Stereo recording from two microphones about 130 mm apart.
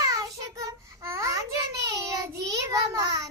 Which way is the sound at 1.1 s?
25° right (ahead or behind).